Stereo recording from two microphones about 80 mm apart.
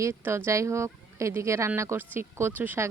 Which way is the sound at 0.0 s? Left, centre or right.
Right.